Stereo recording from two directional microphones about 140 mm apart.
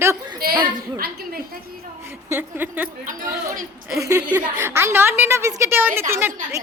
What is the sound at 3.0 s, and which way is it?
Speech, 70° right (ahead or behind).